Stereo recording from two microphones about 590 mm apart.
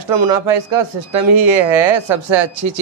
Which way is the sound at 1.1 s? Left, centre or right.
Right.